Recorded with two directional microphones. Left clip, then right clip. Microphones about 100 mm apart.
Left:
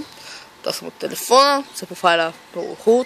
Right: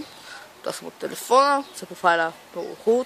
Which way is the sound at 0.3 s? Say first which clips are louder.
Left 5 dB; centre (ahead or behind).